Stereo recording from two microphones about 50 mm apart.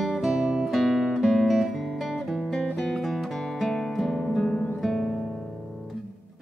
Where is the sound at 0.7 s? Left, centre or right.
Centre.